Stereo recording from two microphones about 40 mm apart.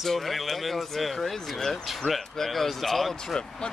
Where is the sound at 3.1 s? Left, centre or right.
Centre.